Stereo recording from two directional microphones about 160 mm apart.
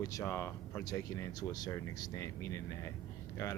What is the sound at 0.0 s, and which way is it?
Speech, 20° left (ahead or behind).